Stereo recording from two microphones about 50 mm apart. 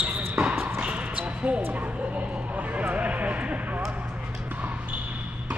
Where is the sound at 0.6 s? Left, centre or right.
Right.